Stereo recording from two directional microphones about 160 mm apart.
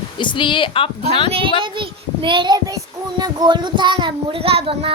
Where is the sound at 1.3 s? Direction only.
35° right (ahead or behind).